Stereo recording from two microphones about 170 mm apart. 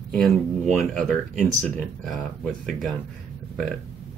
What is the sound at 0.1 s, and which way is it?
Speech, centre (ahead or behind).